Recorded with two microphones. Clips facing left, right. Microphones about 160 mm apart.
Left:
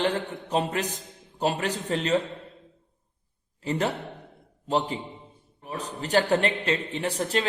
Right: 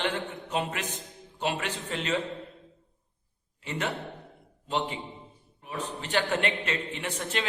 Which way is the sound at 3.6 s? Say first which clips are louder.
Left 5 dB; 35° left (ahead or behind).